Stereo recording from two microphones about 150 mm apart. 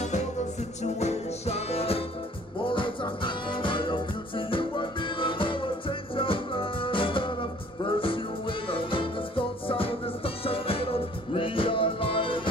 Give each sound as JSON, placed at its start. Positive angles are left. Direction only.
{"t": 0.9, "sound": "music", "side_deg": 45}